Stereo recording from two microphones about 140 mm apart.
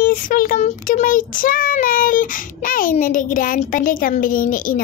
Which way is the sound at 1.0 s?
75° left (ahead or behind).